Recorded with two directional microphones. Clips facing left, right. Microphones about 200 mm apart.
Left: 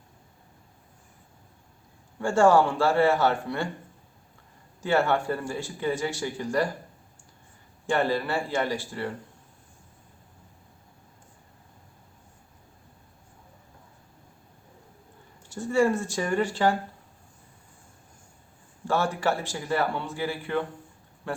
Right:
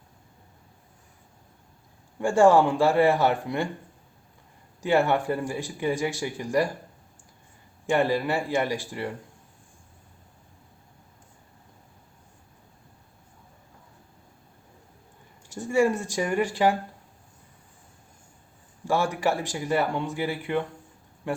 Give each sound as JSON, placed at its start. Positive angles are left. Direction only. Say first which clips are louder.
{"t": 2.1, "sound": "speech", "louder": "right 2 dB", "side_deg": -15}
{"t": 4.8, "sound": "speech", "louder": "right 2 dB", "side_deg": -15}
{"t": 7.9, "sound": "speech", "louder": "right 2 dB", "side_deg": -15}
{"t": 15.5, "sound": "speech", "louder": "even", "side_deg": -15}
{"t": 18.9, "sound": "speech", "louder": "right 1 dB", "side_deg": -10}